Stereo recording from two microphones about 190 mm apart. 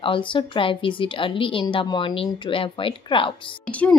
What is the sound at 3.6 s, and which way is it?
Speech, 5° left (ahead or behind).